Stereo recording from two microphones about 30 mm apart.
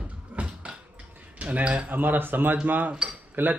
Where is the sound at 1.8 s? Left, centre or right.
Right.